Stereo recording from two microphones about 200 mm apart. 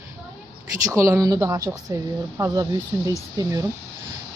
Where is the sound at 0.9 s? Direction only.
15° right (ahead or behind).